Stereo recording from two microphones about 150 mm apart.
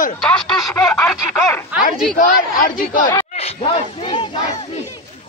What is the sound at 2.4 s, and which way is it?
Speech, 65° left (ahead or behind).